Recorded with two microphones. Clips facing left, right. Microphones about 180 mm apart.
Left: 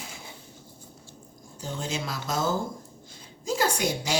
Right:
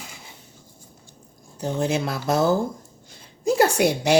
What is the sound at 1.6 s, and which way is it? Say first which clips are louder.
A woman's voice: right 9 dB; 65° right (ahead or behind).